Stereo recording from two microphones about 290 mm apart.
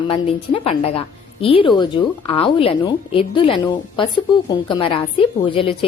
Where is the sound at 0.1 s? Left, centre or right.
Centre.